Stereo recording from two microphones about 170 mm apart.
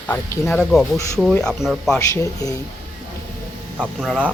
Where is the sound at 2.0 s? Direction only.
20° left (ahead or behind).